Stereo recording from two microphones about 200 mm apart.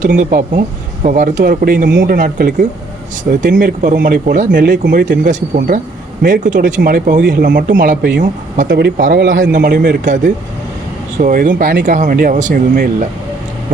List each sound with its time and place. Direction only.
0.0 s speech: 45° right (ahead or behind)
1.9 s speech: 65° right (ahead or behind)
2.1 s speech: 45° right (ahead or behind)
11.2 s speech: 40° right (ahead or behind)